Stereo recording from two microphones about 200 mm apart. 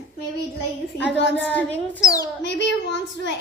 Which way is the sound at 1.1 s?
60° left (ahead or behind).